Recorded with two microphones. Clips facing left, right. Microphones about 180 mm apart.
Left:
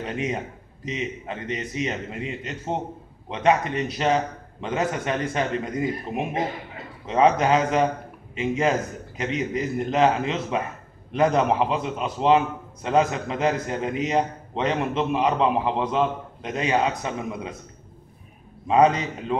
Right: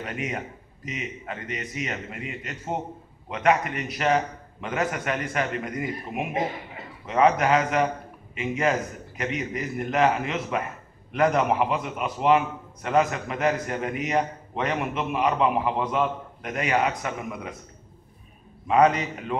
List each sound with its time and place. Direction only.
0.0 s a man's voice: 25° left (ahead or behind)
18.7 s a man's voice: 30° left (ahead or behind)